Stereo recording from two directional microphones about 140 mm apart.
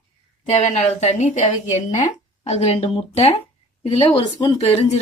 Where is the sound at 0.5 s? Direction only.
55° left (ahead or behind).